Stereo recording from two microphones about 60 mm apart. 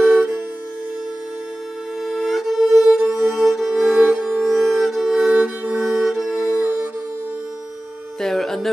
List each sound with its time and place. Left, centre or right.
0.1 s music: centre
2.0 s violin: centre
3.1 s music: centre
4.1 s music: centre
4.4 s music: centre
5.3 s music: centre
5.8 s music: centre
8.2 s a sound: centre